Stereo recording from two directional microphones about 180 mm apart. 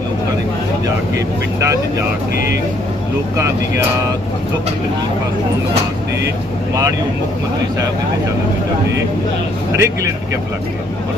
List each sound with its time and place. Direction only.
1.1 s speech: 15° right (ahead or behind)
9.7 s speech: 15° right (ahead or behind)